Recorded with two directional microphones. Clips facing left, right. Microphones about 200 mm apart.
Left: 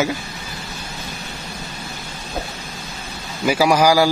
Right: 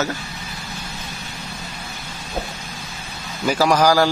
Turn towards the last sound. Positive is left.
turn(degrees=10)  # may be behind; listen again after turning